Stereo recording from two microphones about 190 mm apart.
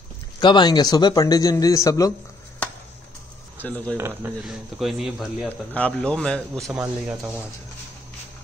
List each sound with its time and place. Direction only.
0.4 s speech: 25° left (ahead or behind)
3.6 s speech: 5° left (ahead or behind)